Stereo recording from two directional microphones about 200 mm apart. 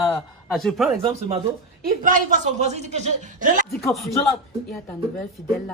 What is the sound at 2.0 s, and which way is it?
Speech, 40° right (ahead or behind).